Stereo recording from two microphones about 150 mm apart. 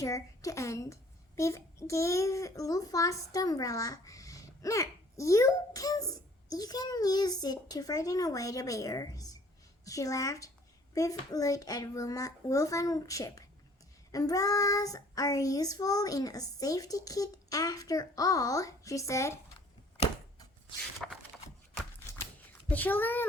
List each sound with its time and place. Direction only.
0.0 s a child's voice: 20° left (ahead or behind)
21.0 s a sound: centre (ahead or behind)
22.7 s a child's voice: 10° left (ahead or behind)